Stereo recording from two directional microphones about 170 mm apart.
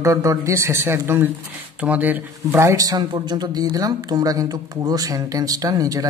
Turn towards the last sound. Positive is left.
turn(degrees=-20)  # may be behind; listen again after turning